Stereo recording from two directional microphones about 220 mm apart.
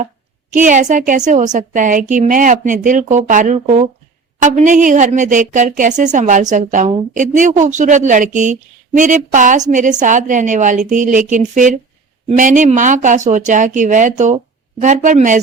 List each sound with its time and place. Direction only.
0.5 s a woman's voice: 35° right (ahead or behind)